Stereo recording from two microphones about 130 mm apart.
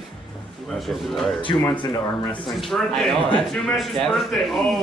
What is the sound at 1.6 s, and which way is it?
Speech, 35° left (ahead or behind).